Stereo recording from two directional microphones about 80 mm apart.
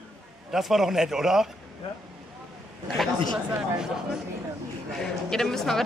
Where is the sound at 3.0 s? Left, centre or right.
Centre.